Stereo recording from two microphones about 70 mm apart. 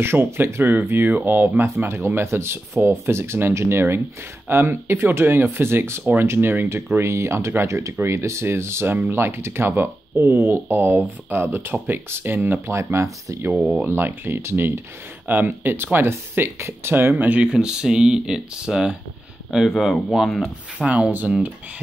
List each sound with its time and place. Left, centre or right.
0.0 s speech: right
13.6 s speech: centre
13.8 s speech: right
17.1 s speech: centre
20.8 s speech: centre